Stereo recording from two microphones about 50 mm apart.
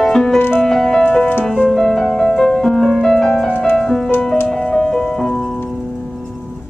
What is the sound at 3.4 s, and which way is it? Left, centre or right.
Music, left.